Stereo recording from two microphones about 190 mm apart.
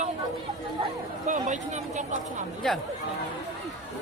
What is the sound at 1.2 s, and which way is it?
Speech, 40° right (ahead or behind).